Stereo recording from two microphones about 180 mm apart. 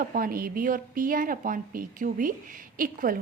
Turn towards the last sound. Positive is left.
turn(degrees=-50)  # may be behind; listen again after turning